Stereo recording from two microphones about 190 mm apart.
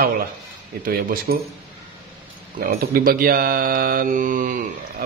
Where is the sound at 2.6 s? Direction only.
50° right (ahead or behind).